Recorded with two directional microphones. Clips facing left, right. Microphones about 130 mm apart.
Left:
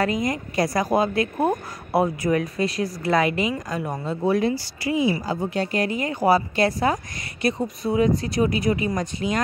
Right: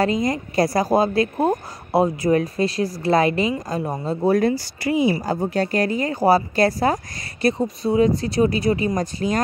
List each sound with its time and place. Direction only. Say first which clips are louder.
0.0 s speech: right 3 dB; 30° right (ahead or behind)
4.3 s speech: right 3 dB; 45° right (ahead or behind)
5.5 s speech: right 3 dB; 40° right (ahead or behind)